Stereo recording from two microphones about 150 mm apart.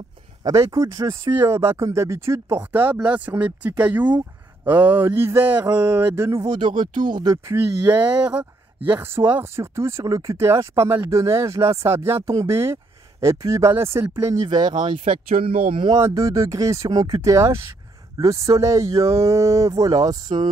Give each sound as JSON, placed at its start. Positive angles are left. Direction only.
{"t": 0.4, "sound": "speech", "side_deg": -20}
{"t": 6.4, "sound": "speech", "side_deg": -30}
{"t": 6.7, "sound": "speech", "side_deg": -60}
{"t": 7.2, "sound": "speech", "side_deg": -25}
{"t": 14.5, "sound": "speech", "side_deg": -30}
{"t": 16.0, "sound": "speech", "side_deg": -20}